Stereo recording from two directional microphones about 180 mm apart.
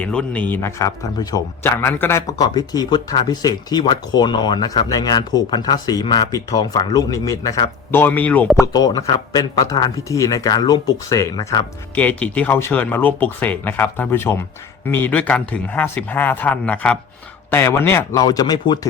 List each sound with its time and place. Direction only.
0.0 s a man's voice: 5° left (ahead or behind)
8.6 s a man's voice: 20° left (ahead or behind)
11.9 s a man's voice: 5° left (ahead or behind); by 18.9 s 25° left (ahead or behind)